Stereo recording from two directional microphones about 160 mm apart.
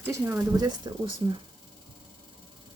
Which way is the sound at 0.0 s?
15° right (ahead or behind).